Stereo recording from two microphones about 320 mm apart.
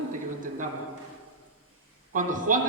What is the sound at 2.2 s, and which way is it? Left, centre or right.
Speech, right.